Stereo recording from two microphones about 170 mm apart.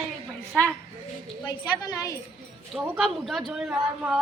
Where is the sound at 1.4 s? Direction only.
25° left (ahead or behind).